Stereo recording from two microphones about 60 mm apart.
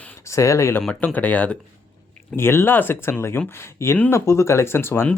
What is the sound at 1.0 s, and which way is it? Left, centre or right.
Speech, left.